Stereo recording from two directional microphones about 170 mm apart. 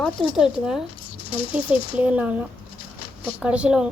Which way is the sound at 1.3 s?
30° left (ahead or behind).